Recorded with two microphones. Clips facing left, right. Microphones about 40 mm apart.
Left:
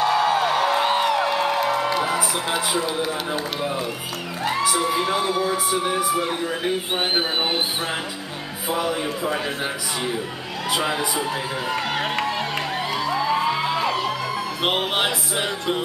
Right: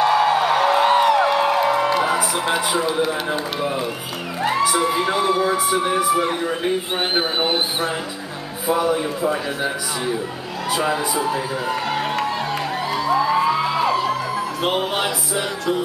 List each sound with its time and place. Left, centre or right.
0.0 s music: centre
3.1 s speech: centre
10.8 s speech: centre
13.0 s music: centre
13.3 s music: centre
14.6 s music: left